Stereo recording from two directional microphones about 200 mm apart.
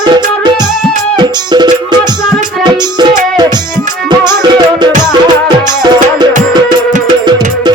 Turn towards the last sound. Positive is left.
turn(degrees=-20)  # may be behind; listen again after turning